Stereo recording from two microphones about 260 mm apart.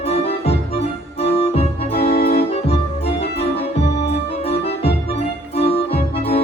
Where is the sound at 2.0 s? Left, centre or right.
Left.